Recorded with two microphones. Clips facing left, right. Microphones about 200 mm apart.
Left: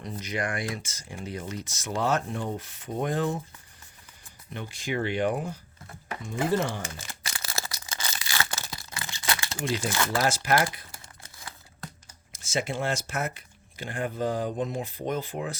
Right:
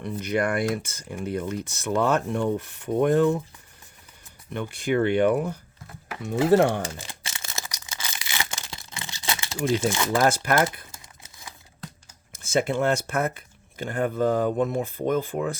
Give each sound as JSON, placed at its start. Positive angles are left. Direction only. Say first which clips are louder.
{"t": 0.0, "sound": "speech", "louder": "right 7 dB", "side_deg": -60}
{"t": 4.5, "sound": "speech", "louder": "right 7 dB", "side_deg": -60}
{"t": 6.2, "sound": "speech", "louder": "right 8 dB", "side_deg": -75}
{"t": 7.2, "sound": "a sound", "louder": "left 1 dB", "side_deg": -25}
{"t": 8.2, "sound": "crumpling", "louder": "even", "side_deg": -20}
{"t": 9.9, "sound": "speech", "louder": "right 3 dB", "side_deg": -15}
{"t": 10.2, "sound": "speech", "louder": "right 4 dB", "side_deg": -55}
{"t": 12.4, "sound": "speech", "louder": "right 6 dB", "side_deg": -55}